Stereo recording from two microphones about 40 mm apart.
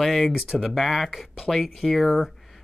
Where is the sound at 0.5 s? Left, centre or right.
Centre.